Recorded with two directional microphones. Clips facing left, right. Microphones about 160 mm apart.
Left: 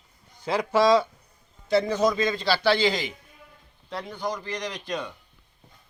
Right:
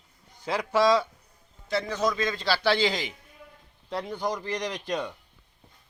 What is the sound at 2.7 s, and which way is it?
Speech, 15° right (ahead or behind).